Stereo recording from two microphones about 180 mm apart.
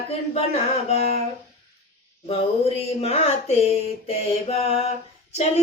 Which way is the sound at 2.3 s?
35° left (ahead or behind).